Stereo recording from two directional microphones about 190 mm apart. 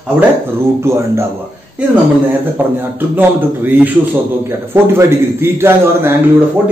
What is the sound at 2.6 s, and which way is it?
A man's voice, 10° right (ahead or behind).